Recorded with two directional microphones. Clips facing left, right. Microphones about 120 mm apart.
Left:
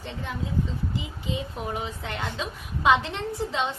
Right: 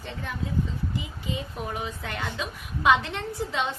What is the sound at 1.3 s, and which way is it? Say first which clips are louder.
A woman's voice: left 2 dB; 25° left (ahead or behind).